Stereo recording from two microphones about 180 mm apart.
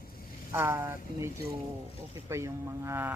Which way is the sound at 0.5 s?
15° right (ahead or behind).